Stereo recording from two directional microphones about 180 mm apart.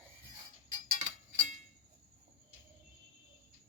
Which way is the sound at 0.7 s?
40° right (ahead or behind).